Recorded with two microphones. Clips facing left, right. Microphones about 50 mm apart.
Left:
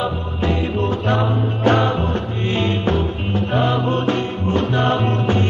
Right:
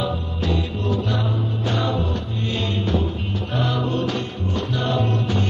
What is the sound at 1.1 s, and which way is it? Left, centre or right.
Music, left.